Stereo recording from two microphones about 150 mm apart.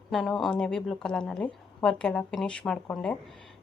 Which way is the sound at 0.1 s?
Centre (ahead or behind).